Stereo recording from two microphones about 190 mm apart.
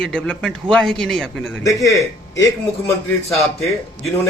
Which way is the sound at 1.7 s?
15° left (ahead or behind).